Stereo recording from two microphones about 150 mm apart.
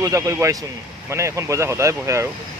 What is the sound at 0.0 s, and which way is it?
Speech, 20° right (ahead or behind).